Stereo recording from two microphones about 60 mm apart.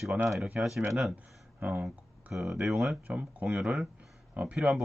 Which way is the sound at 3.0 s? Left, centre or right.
Right.